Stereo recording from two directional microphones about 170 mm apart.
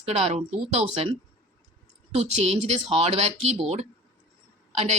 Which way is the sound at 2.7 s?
40° right (ahead or behind).